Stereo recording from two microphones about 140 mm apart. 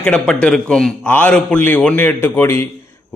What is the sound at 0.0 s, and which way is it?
A man's voice, 5° left (ahead or behind).